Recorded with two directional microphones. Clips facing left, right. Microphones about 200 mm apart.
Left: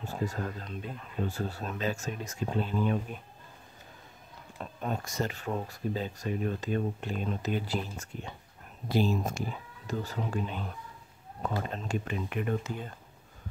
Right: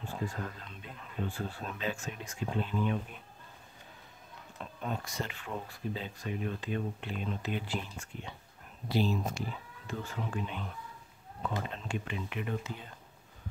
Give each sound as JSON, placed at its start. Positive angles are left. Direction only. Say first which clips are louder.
{"t": 0.0, "sound": "speech", "louder": "left 4 dB", "side_deg": 40}
{"t": 4.6, "sound": "speech", "louder": "left 3 dB", "side_deg": 45}